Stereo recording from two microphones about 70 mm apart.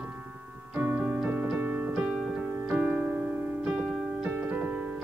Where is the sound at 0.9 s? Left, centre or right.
Centre.